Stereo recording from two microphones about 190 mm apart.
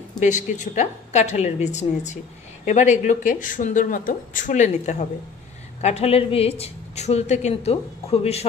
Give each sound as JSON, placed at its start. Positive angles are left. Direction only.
{"t": 0.2, "sound": "a woman's voice", "side_deg": 40}